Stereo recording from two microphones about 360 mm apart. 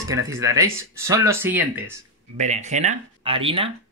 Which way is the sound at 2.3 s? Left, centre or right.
Centre.